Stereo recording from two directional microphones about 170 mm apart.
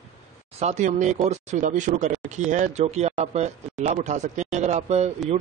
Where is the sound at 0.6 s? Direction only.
40° right (ahead or behind).